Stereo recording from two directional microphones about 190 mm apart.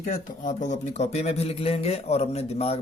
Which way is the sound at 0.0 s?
40° left (ahead or behind).